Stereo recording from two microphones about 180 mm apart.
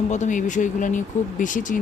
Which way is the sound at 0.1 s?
45° left (ahead or behind).